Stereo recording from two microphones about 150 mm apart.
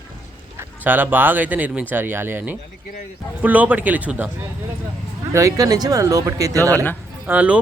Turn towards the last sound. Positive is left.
turn(degrees=-10)  # may be behind; listen again after turning